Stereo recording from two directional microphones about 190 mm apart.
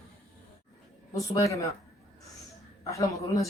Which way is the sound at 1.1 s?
15° left (ahead or behind).